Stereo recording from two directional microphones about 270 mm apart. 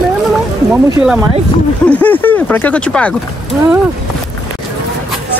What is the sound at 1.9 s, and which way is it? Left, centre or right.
Speech, centre.